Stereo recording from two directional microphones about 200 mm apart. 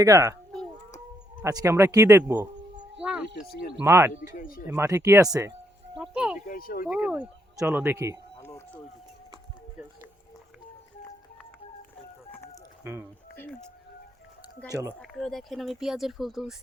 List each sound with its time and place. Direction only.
0.0 s speech: 15° right (ahead or behind)
1.4 s speech: 15° right (ahead or behind)
3.8 s speech: 10° right (ahead or behind)
4.4 s speech: 45° left (ahead or behind)
4.7 s speech: 15° right (ahead or behind)
5.9 s music: 5° right (ahead or behind)
6.5 s speech: 45° left (ahead or behind)
6.8 s speech: 5° right (ahead or behind)
8.4 s a sound: 10° left (ahead or behind)
12.8 s speech: 15° right (ahead or behind)
13.3 s music: 5° left (ahead or behind)
14.7 s speech: 15° right (ahead or behind)
14.9 s speech: centre (ahead or behind)